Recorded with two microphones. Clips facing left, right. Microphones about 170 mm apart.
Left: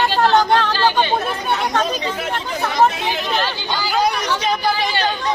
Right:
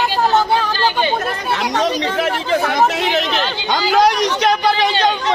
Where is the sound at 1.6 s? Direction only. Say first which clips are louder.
Right 2 dB; 90° right.